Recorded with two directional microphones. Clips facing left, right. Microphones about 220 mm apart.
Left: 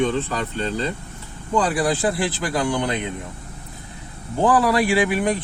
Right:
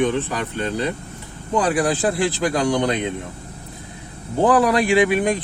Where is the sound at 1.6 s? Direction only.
15° right (ahead or behind).